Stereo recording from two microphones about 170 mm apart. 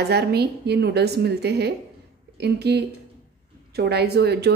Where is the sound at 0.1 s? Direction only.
75° right (ahead or behind).